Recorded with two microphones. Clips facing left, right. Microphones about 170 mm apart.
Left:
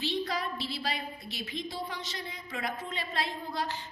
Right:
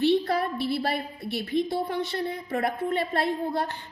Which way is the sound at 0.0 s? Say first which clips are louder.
Right 10 dB; 60° right (ahead or behind).